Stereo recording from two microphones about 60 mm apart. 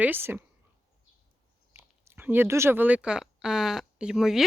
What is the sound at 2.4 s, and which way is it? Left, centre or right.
Speech, right.